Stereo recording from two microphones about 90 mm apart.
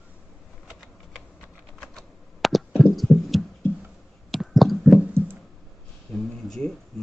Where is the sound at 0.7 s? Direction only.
5° right (ahead or behind).